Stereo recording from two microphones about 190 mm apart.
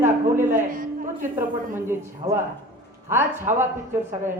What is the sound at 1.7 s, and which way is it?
Speech, 15° right (ahead or behind).